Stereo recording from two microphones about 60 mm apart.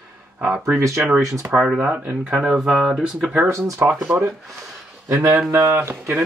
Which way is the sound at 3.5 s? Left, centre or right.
Right.